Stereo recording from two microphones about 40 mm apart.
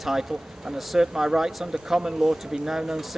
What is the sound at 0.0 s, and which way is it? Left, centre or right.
Speech, centre.